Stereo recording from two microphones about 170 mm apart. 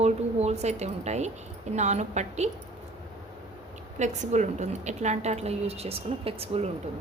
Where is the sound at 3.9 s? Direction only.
45° right (ahead or behind).